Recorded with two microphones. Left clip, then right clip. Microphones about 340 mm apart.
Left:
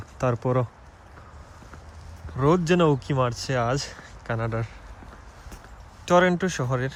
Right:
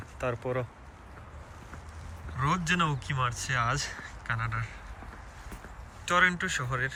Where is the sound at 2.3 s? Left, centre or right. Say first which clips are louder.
Left 7 dB; centre.